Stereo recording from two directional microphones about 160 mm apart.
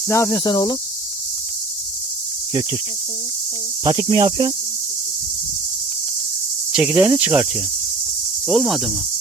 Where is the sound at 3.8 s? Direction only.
25° right (ahead or behind).